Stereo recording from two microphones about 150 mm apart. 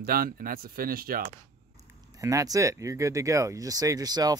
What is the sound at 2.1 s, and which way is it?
Speech, 20° right (ahead or behind).